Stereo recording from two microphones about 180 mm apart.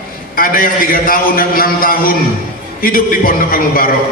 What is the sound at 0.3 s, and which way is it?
A man's voice, 50° left (ahead or behind).